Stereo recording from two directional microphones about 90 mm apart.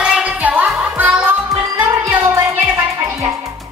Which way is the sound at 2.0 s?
30° right (ahead or behind).